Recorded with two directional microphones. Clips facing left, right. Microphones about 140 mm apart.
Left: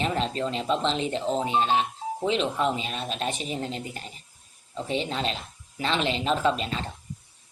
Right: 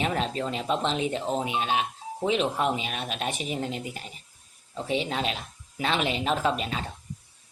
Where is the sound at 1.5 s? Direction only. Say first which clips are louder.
Left 4 dB; 35° left (ahead or behind).